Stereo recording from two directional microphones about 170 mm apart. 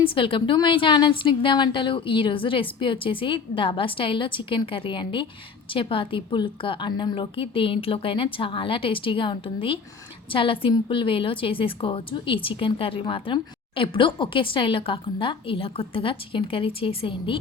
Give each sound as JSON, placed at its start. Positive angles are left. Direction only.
{"t": 0.0, "sound": "a woman's voice", "side_deg": 30}